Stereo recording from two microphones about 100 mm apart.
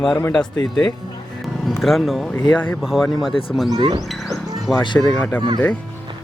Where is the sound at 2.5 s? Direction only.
20° left (ahead or behind).